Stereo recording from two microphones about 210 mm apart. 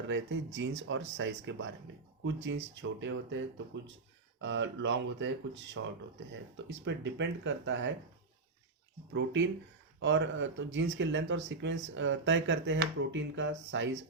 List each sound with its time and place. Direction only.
0.1 s speech: 60° right (ahead or behind)
9.1 s speech: 60° right (ahead or behind)